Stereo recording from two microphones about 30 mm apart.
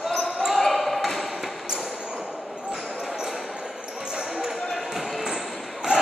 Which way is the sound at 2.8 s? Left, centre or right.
Centre.